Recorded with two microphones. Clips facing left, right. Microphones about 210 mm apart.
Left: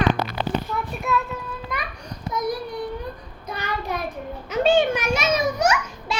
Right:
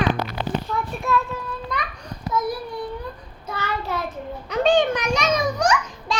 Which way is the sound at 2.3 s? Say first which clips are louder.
Right 1 dB; 15° left (ahead or behind).